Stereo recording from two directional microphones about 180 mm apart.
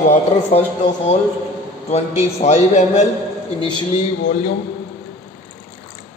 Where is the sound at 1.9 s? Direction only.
35° left (ahead or behind).